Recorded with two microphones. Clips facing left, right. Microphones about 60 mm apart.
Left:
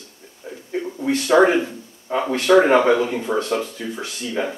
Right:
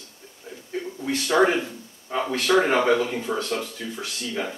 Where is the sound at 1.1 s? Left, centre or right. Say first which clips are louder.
Left 5 dB; centre.